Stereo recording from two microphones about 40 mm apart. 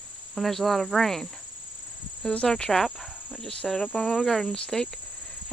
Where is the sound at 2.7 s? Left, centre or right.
Centre.